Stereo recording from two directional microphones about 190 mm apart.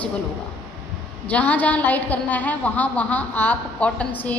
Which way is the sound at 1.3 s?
10° left (ahead or behind).